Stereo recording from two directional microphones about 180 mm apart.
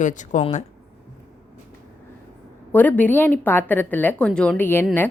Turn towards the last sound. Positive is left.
turn(degrees=10)  # may be behind; listen again after turning